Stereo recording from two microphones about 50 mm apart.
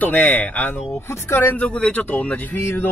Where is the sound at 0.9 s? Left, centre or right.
Left.